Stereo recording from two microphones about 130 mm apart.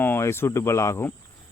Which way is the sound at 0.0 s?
15° left (ahead or behind).